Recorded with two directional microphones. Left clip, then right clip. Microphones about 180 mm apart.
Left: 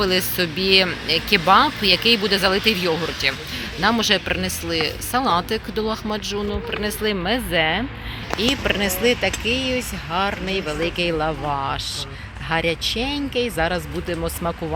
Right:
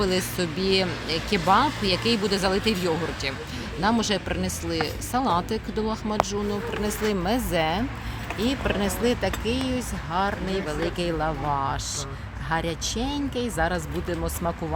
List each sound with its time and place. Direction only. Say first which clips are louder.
0.0 s speech: left 5 dB; centre (ahead or behind); by 14.5 s 20° left (ahead or behind)